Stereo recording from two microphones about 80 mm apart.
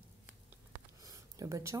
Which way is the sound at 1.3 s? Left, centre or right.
Right.